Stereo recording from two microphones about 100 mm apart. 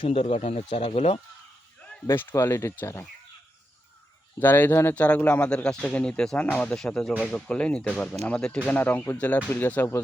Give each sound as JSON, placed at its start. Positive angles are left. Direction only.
{"t": 0.0, "sound": "speech", "side_deg": 70}
{"t": 2.3, "sound": "speech", "side_deg": 30}
{"t": 4.4, "sound": "speech", "side_deg": 20}